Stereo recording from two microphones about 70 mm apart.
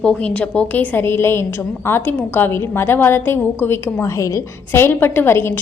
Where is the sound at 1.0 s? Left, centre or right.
Left.